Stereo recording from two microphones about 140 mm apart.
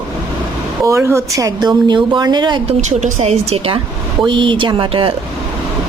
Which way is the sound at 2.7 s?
55° right (ahead or behind).